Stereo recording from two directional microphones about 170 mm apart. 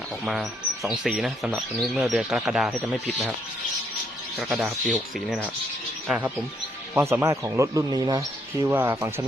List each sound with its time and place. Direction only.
0.3 s speech: centre (ahead or behind)
4.4 s speech: 5° right (ahead or behind)
6.1 s speech: 10° right (ahead or behind)
8.6 s speech: 10° right (ahead or behind)